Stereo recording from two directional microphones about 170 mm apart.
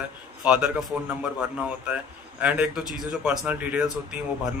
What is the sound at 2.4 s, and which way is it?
Speech, 10° right (ahead or behind).